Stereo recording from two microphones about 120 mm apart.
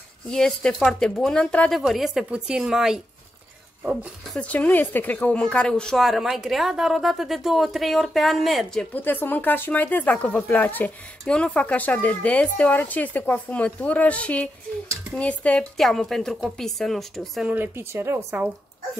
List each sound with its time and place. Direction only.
0.3 s a woman's voice: 5° left (ahead or behind)
4.3 s a woman's voice: 10° left (ahead or behind)
8.9 s a woman's voice: 15° left (ahead or behind)
17.5 s speech: 15° right (ahead or behind)